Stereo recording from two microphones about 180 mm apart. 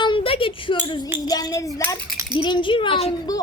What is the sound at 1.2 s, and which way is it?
A woman's voice, 20° left (ahead or behind).